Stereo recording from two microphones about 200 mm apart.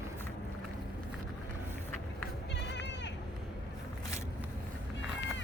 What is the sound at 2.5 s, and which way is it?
Goat, 60° left (ahead or behind).